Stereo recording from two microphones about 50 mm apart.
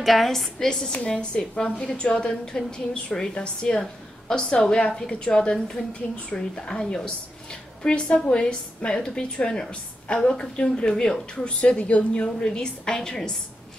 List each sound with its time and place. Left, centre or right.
0.0 s a woman's voice: centre
0.9 s a woman's voice: left
6.7 s a woman's voice: centre
7.8 s a woman's voice: left